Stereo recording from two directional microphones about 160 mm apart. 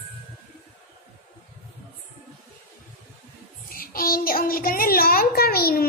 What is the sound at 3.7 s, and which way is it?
A child's voice, 65° left (ahead or behind).